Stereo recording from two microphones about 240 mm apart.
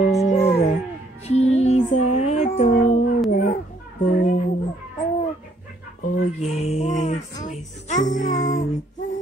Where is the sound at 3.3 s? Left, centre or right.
Left.